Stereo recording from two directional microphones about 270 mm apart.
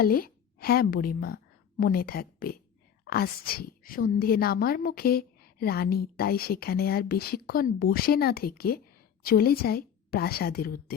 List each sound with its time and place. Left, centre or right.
0.0 s a woman's voice: left